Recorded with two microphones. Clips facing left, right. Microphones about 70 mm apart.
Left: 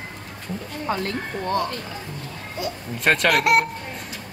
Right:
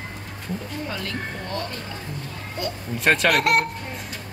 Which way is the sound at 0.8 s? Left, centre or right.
Left.